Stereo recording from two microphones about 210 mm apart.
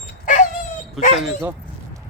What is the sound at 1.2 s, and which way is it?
Speech, 5° right (ahead or behind).